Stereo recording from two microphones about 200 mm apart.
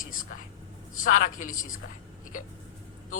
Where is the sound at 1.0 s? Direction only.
40° left (ahead or behind).